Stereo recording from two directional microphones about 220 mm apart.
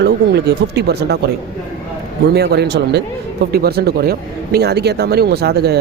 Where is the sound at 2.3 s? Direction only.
50° right (ahead or behind).